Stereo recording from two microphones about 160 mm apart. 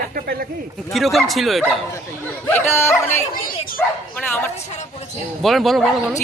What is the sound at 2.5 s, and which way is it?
Speech, 15° left (ahead or behind).